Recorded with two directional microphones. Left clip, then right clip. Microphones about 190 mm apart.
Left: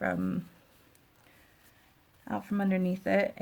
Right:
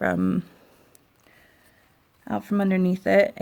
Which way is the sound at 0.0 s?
50° right (ahead or behind).